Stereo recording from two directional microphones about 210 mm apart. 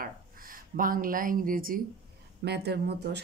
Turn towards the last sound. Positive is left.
turn(degrees=-50)  # may be behind; listen again after turning